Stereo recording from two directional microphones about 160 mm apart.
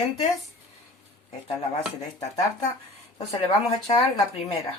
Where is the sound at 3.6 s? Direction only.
35° left (ahead or behind).